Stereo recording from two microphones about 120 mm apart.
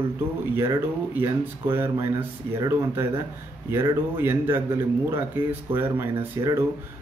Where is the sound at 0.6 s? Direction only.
20° right (ahead or behind).